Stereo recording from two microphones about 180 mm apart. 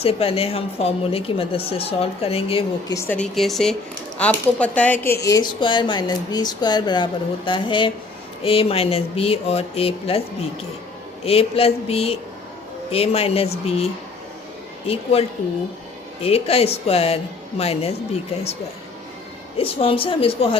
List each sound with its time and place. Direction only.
0.0 s speech: 35° left (ahead or behind)
2.9 s speech: 15° left (ahead or behind)
3.3 s speech: centre (ahead or behind)
5.2 s speech: 20° left (ahead or behind)
11.3 s speech: 35° left (ahead or behind)
16.2 s speech: 35° left (ahead or behind)
19.5 s speech: 30° left (ahead or behind)